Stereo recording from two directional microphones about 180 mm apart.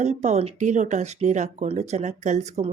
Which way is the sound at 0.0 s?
40° right (ahead or behind).